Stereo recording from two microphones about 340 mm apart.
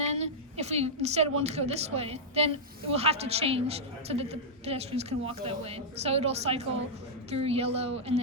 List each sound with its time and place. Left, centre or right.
0.0 s a woman's voice: centre